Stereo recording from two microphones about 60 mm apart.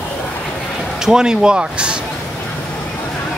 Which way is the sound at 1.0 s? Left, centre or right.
Centre.